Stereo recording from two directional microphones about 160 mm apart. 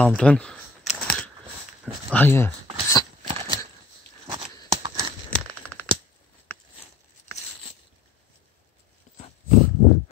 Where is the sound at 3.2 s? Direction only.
35° right (ahead or behind).